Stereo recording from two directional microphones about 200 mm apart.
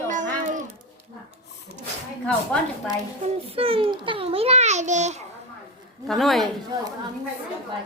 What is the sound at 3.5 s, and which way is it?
A child's voice, 30° right (ahead or behind).